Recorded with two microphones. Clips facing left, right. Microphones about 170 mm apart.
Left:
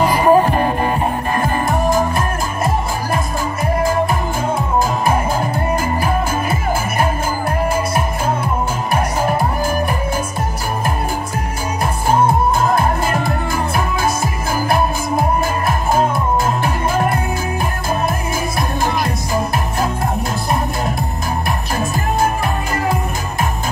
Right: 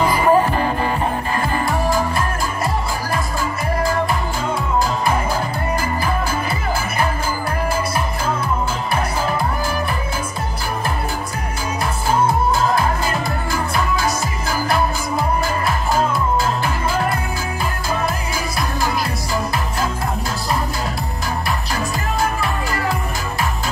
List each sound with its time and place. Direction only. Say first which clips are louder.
0.1 s music: left 3 dB; 40° left (ahead or behind)
8.9 s music: left 4 dB; 45° left (ahead or behind)
12.3 s music: left 2 dB; 50° left (ahead or behind)
19.0 s music: left 3 dB; 20° left (ahead or behind)